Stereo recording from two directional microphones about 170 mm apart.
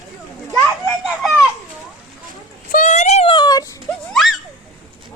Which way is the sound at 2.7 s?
45° left (ahead or behind).